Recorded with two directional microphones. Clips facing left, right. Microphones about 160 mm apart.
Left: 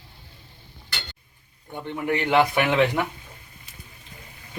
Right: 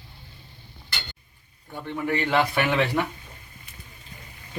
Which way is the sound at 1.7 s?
15° left (ahead or behind).